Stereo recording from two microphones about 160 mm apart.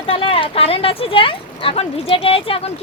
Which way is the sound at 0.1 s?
35° left (ahead or behind).